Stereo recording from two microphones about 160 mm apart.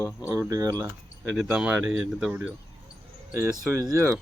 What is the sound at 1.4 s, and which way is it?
Speech, 5° right (ahead or behind).